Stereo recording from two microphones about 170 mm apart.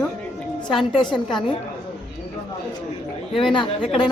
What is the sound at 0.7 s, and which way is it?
Speech, centre (ahead or behind).